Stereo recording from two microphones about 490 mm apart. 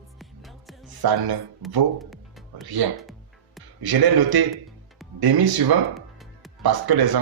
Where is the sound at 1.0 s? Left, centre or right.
Right.